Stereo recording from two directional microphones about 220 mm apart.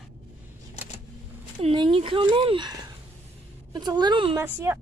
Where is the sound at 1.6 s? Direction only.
25° right (ahead or behind).